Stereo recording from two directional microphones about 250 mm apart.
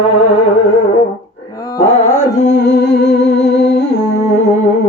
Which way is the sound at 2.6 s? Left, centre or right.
Left.